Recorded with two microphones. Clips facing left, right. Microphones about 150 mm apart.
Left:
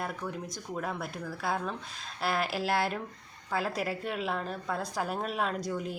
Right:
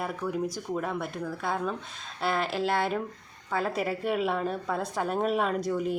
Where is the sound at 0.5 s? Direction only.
Centre (ahead or behind).